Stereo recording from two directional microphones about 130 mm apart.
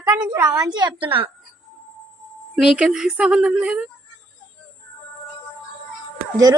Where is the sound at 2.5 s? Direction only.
5° right (ahead or behind).